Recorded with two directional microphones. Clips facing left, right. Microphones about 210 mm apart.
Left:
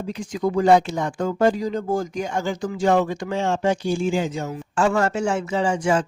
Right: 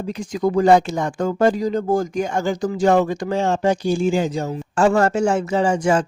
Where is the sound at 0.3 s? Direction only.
45° right (ahead or behind).